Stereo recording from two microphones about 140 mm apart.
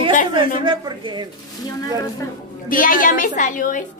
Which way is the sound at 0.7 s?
35° right (ahead or behind).